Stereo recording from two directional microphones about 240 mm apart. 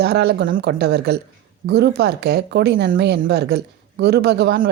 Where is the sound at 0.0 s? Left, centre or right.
Right.